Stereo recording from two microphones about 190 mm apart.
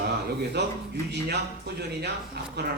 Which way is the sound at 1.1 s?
60° right (ahead or behind).